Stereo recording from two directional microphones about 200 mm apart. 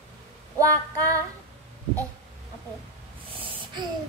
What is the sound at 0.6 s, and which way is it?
Female singing, 15° right (ahead or behind).